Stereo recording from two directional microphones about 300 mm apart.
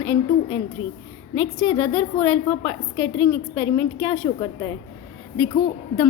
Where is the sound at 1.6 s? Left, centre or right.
Centre.